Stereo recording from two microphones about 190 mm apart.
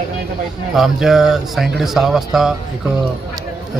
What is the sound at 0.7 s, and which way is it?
A man's voice, centre (ahead or behind).